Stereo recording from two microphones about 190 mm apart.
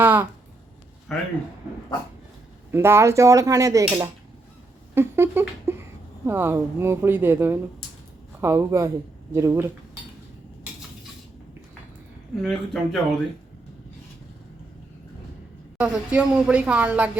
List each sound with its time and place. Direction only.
0.0 s a sound: 10° right (ahead or behind)
1.1 s speech: centre (ahead or behind)
2.7 s speech: 15° right (ahead or behind)
12.4 s speech: centre (ahead or behind)
15.8 s speech: 5° right (ahead or behind)